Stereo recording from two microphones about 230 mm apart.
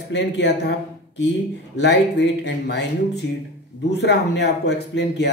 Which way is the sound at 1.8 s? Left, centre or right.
Left.